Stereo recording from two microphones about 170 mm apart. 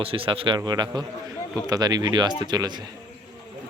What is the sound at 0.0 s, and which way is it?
Speech, 35° right (ahead or behind).